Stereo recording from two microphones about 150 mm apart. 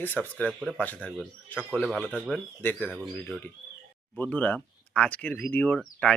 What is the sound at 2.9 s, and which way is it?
A man's voice, centre (ahead or behind).